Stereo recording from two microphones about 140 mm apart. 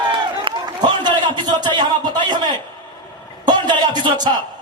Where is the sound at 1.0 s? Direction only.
35° right (ahead or behind).